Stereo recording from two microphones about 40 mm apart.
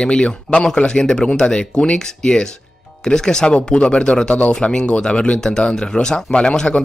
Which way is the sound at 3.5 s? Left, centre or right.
Left.